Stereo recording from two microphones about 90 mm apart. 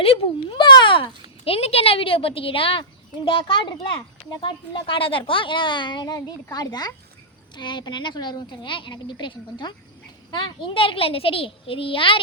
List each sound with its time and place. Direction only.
0.0 s a child's voice: 75° left (ahead or behind)
3.2 s a child's voice: 70° left (ahead or behind)